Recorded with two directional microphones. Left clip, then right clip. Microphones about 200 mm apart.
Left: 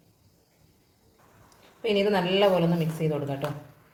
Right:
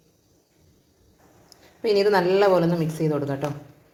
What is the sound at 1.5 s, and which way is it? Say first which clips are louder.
Speech: right 5 dB; 30° right (ahead or behind).